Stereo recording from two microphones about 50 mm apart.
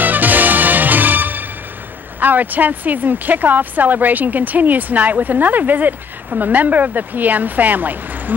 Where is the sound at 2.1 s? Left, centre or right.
Right.